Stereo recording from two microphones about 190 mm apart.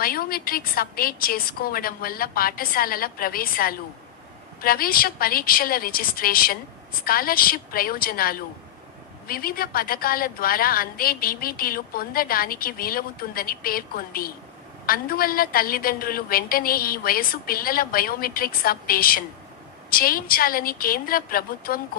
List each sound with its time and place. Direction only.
0.0 s a woman's voice: 50° left (ahead or behind)